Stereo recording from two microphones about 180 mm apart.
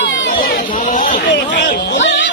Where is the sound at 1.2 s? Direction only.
75° left (ahead or behind).